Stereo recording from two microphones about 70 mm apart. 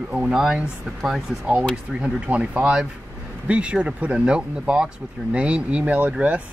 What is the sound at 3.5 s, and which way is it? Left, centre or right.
Speech, centre.